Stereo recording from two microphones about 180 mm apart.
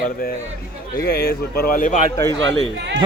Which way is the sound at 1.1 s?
60° left (ahead or behind).